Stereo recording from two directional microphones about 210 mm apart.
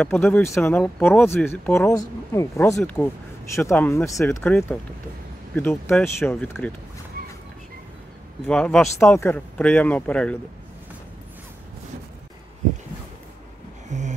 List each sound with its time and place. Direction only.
0.0 s speech: 10° left (ahead or behind)
8.5 s speech: 5° left (ahead or behind)
13.8 s a sound: 35° right (ahead or behind)